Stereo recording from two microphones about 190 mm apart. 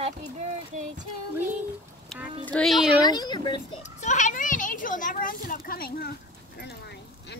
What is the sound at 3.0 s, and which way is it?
Speech, 20° left (ahead or behind).